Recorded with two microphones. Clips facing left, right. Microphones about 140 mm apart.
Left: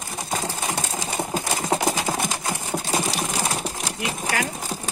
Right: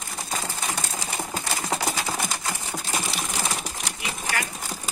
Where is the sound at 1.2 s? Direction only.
15° left (ahead or behind).